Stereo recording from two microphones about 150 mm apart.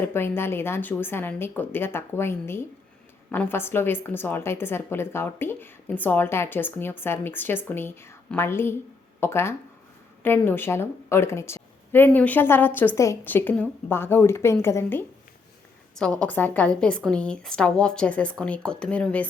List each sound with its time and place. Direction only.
0.0 s a woman's voice: 15° left (ahead or behind)
16.0 s a woman's voice: 5° left (ahead or behind)